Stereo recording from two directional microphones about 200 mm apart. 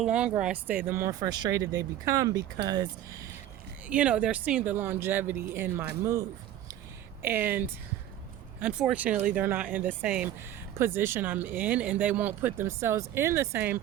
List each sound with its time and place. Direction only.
0.0 s speech: 5° right (ahead or behind)
3.8 s speech: 5° right (ahead or behind)
7.2 s speech: 10° right (ahead or behind)
8.6 s speech: 5° right (ahead or behind)